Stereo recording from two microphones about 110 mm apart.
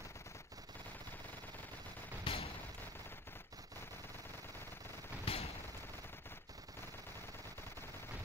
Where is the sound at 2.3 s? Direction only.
50° left (ahead or behind).